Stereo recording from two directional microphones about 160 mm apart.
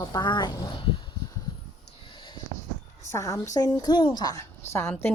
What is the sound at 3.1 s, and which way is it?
A woman's voice, 20° left (ahead or behind).